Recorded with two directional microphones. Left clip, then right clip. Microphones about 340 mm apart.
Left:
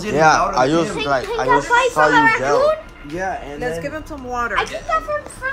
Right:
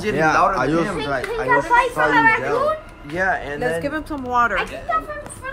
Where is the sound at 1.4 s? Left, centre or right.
Left.